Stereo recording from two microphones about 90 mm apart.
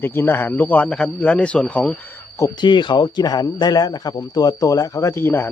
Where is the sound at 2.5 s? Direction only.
60° left (ahead or behind).